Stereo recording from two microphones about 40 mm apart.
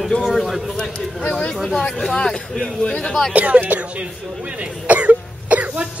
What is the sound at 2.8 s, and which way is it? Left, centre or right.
Speech, left.